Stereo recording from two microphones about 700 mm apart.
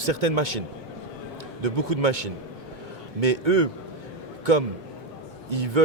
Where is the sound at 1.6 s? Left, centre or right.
Right.